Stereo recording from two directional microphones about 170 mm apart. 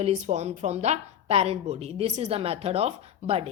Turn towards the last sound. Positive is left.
turn(degrees=-35)  # may be behind; listen again after turning